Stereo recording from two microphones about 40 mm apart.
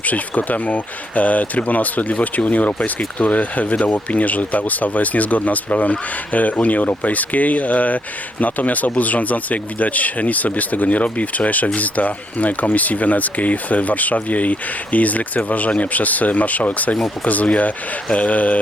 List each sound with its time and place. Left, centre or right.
0.1 s speech: left